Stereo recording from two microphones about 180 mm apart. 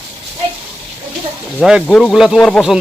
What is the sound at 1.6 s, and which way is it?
Speech, centre (ahead or behind).